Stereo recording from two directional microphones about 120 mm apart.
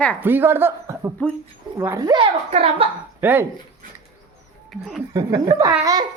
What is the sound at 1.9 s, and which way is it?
Speech, 35° right (ahead or behind).